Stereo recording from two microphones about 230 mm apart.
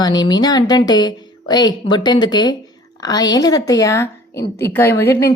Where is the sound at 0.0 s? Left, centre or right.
Centre.